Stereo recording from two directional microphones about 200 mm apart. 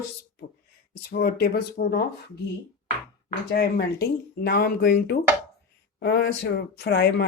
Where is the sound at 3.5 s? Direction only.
50° left (ahead or behind).